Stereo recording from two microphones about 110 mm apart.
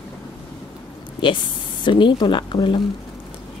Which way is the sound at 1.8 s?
45° left (ahead or behind).